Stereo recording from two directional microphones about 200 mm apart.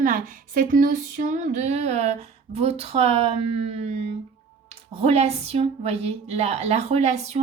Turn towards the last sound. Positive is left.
turn(degrees=-35)  # may be behind; listen again after turning